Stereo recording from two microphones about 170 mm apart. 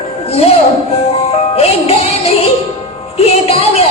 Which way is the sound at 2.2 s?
35° left (ahead or behind).